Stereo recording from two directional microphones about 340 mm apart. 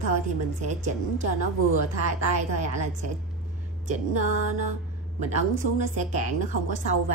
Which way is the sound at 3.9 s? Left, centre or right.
Right.